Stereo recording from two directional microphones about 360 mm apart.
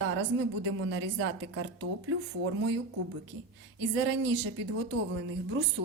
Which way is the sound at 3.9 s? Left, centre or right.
Right.